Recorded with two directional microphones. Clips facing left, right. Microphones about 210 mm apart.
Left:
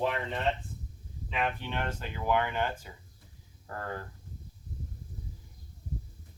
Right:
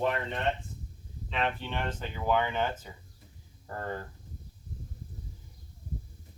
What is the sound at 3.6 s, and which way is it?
Speech, 20° right (ahead or behind).